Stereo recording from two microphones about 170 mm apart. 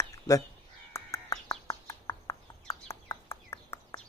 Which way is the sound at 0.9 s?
20° left (ahead or behind).